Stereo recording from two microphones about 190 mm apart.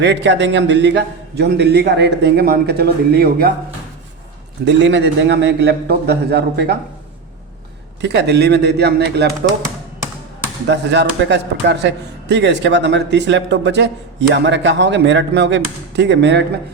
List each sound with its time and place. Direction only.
0.0 s a man's voice: 70° right (ahead or behind)
4.6 s a man's voice: 70° right (ahead or behind)
8.0 s a man's voice: 65° right (ahead or behind)
10.7 s speech: 65° right (ahead or behind)